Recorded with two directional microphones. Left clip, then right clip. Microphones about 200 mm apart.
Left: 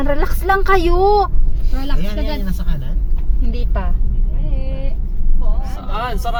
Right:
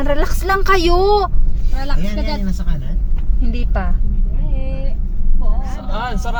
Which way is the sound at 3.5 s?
10° right (ahead or behind).